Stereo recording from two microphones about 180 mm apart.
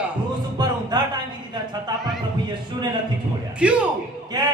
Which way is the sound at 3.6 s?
5° right (ahead or behind).